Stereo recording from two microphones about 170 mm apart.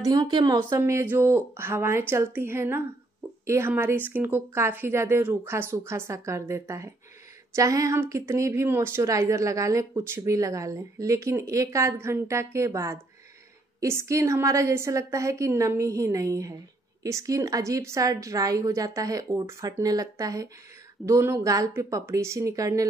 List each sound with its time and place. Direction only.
0.0 s a woman's voice: 25° right (ahead or behind)